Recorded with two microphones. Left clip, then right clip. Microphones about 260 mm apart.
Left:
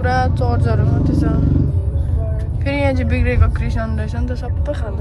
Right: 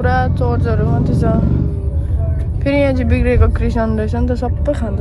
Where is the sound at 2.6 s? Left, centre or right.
Centre.